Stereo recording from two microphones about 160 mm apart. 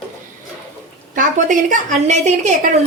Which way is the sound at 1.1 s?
55° right (ahead or behind).